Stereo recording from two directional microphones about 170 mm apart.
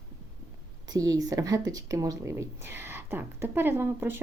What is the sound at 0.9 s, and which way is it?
Speech, 20° right (ahead or behind).